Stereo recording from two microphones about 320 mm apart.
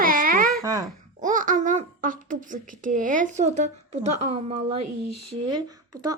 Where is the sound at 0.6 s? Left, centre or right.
Centre.